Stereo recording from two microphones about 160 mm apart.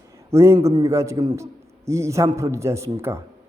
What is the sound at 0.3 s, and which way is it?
A man's voice, 15° right (ahead or behind).